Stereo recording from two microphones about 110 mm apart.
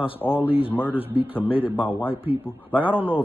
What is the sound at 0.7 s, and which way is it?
Speech, 15° left (ahead or behind).